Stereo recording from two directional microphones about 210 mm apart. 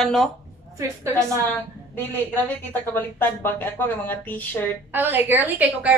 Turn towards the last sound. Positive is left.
turn(degrees=-10)  # may be behind; listen again after turning